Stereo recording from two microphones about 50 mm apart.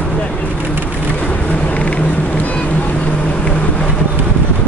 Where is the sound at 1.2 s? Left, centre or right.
Left.